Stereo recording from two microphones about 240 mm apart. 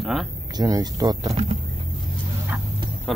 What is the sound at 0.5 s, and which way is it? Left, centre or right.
Speech, centre.